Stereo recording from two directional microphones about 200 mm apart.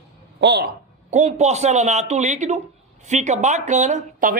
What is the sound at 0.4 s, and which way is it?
Speech, 55° right (ahead or behind).